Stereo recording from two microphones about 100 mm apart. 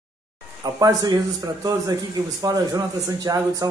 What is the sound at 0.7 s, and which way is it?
Speech, 35° right (ahead or behind).